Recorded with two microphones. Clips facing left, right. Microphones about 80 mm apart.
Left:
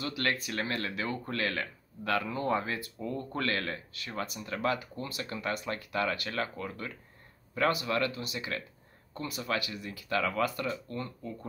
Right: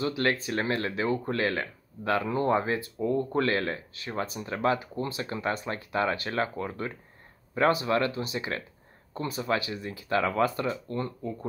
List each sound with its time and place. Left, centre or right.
0.0 s speech: right